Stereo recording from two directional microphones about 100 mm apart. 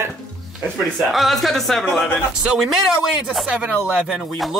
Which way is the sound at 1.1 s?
Centre (ahead or behind).